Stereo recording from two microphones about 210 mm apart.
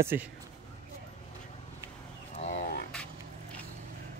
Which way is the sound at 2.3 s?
35° left (ahead or behind).